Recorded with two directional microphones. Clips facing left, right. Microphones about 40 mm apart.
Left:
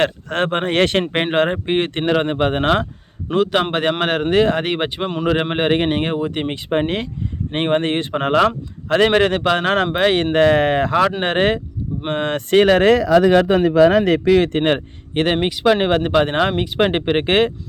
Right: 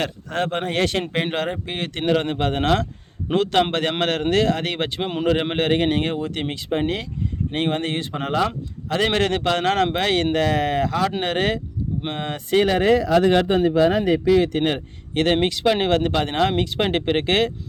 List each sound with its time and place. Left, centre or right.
0.0 s speech: left
3.3 s speech: centre
6.6 s speech: left
9.0 s speech: left
10.3 s speech: left
12.1 s speech: left
15.1 s speech: left